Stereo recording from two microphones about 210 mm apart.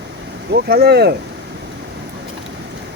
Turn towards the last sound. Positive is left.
turn(degrees=-50)  # may be behind; listen again after turning